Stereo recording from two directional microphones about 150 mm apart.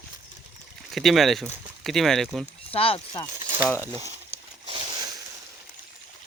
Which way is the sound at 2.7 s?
40° left (ahead or behind).